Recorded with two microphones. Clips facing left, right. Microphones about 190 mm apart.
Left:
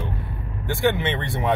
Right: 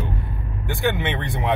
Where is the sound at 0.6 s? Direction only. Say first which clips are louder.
Left 2 dB; 20° right (ahead or behind).